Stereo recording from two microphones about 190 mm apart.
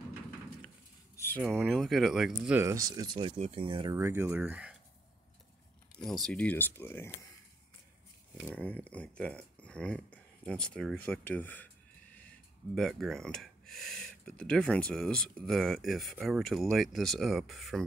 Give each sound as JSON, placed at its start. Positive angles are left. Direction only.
{"t": 1.1, "sound": "a sound", "side_deg": 10}
{"t": 1.7, "sound": "speech", "side_deg": 0}
{"t": 2.6, "sound": "speech", "side_deg": -15}
{"t": 3.9, "sound": "speech", "side_deg": -15}
{"t": 6.0, "sound": "speech", "side_deg": 0}
{"t": 8.5, "sound": "speech", "side_deg": 5}